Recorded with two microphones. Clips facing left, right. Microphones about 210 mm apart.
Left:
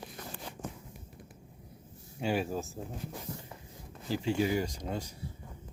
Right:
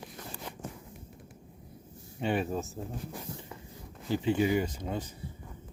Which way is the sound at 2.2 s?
Centre (ahead or behind).